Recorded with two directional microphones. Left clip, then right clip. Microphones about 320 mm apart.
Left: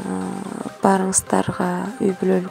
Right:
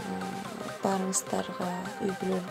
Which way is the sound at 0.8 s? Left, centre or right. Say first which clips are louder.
Left 12 dB; left.